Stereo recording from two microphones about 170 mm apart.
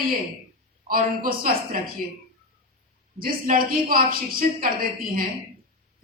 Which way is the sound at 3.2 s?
55° right (ahead or behind).